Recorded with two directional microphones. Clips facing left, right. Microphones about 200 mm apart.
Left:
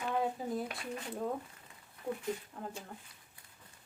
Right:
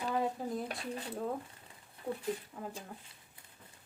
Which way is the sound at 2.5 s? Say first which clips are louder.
Even; 5° right (ahead or behind).